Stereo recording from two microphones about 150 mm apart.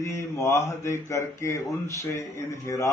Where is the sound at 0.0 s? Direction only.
20° left (ahead or behind).